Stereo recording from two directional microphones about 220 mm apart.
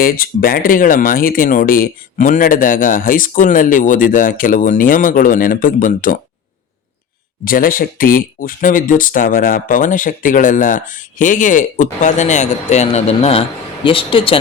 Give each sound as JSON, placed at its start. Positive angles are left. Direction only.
{"t": 0.0, "sound": "speech", "side_deg": 40}
{"t": 7.4, "sound": "speech", "side_deg": 40}